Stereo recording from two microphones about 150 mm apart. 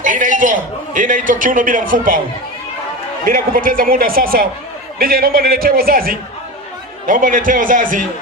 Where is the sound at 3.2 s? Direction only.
65° right (ahead or behind).